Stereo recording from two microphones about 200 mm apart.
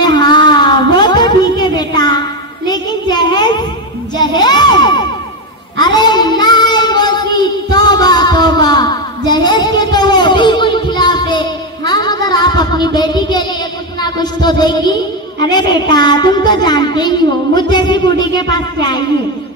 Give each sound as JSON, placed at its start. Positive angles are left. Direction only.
{"t": 0.0, "sound": "a sound", "side_deg": 20}
{"t": 4.2, "sound": "crowd", "side_deg": 20}
{"t": 5.8, "sound": "child singing", "side_deg": 20}
{"t": 14.0, "sound": "a woman's voice", "side_deg": 20}